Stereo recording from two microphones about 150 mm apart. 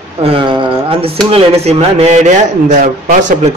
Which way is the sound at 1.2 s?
40° right (ahead or behind).